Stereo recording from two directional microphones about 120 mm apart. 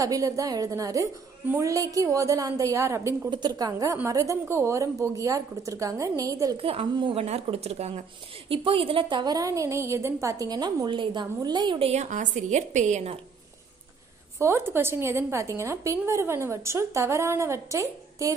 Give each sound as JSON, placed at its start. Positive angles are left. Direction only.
{"t": 0.0, "sound": "a woman's voice", "side_deg": -30}
{"t": 3.3, "sound": "a woman's voice", "side_deg": -35}
{"t": 6.5, "sound": "a woman's voice", "side_deg": -50}
{"t": 8.5, "sound": "a woman's voice", "side_deg": -50}
{"t": 11.8, "sound": "a woman's voice", "side_deg": -70}
{"t": 14.4, "sound": "a woman's voice", "side_deg": -20}